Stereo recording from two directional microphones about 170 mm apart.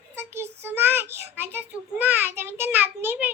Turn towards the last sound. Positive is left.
turn(degrees=-10)  # may be behind; listen again after turning